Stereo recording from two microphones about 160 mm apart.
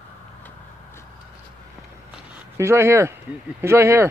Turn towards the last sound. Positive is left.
turn(degrees=-15)  # may be behind; listen again after turning